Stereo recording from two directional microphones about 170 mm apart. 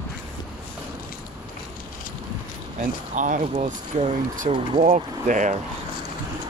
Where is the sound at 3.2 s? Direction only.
45° right (ahead or behind).